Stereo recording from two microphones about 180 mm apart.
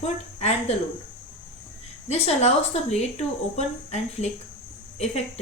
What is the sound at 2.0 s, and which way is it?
A woman's voice, 35° left (ahead or behind).